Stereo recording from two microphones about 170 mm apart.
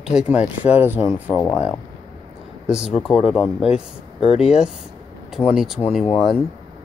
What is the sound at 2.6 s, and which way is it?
Speech, 5° right (ahead or behind).